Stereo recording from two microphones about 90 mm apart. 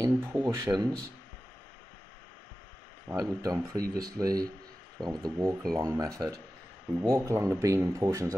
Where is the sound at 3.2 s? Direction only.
40° right (ahead or behind).